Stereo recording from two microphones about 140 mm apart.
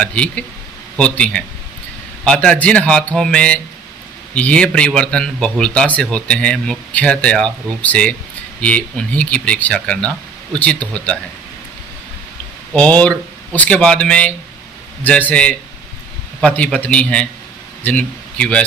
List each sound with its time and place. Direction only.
0.0 s speech: 10° left (ahead or behind)
12.7 s a man's voice: 10° left (ahead or behind)